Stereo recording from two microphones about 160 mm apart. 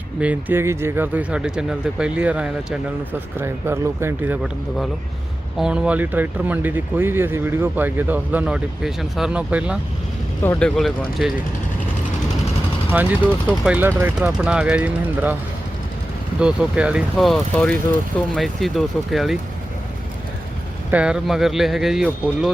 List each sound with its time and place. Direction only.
0.2 s speech: 10° right (ahead or behind)
5.5 s speech: 5° right (ahead or behind)
10.4 s speech: 15° left (ahead or behind)
10.8 s speech: centre (ahead or behind)
12.9 s speech: 10° right (ahead or behind)
16.4 s speech: 5° right (ahead or behind)
20.9 s speech: 5° right (ahead or behind)